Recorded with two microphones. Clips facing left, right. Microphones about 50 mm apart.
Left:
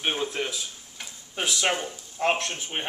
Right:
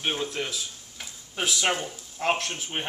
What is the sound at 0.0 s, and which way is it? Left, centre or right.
Speech, centre.